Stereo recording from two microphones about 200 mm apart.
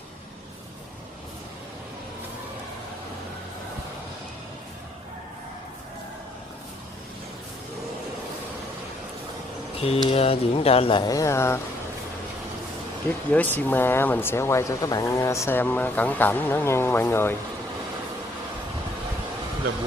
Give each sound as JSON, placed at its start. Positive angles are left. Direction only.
{"t": 10.0, "sound": "speech", "side_deg": 30}
{"t": 13.3, "sound": "speech", "side_deg": 10}